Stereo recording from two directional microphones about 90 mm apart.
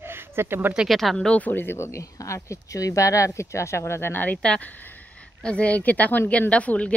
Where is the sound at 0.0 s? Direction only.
25° right (ahead or behind).